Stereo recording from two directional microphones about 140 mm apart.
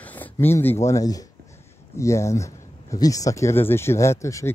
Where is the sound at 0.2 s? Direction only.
15° left (ahead or behind).